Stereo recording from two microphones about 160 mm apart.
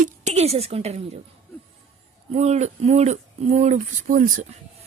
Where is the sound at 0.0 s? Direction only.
45° right (ahead or behind).